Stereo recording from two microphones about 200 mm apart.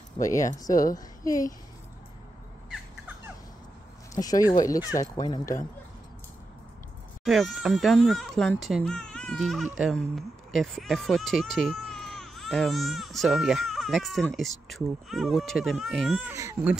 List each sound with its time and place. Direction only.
0.2 s a woman's voice: 15° left (ahead or behind)
4.1 s speech: 20° left (ahead or behind)
7.2 s speech: centre (ahead or behind)
16.3 s speech: 15° right (ahead or behind)